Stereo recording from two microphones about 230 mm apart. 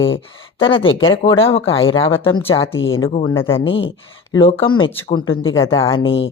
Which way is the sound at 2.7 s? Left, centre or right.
Left.